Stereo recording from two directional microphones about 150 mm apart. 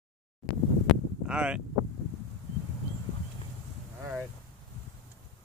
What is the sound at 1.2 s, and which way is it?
Speech, 5° right (ahead or behind).